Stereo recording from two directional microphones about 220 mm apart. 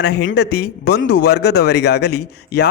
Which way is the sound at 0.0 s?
45° left (ahead or behind).